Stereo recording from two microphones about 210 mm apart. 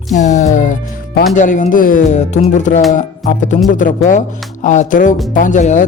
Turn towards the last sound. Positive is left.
turn(degrees=35)  # may be behind; listen again after turning